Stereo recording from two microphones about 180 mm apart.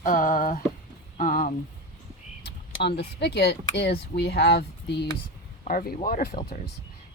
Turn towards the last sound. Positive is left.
turn(degrees=60)  # may be behind; listen again after turning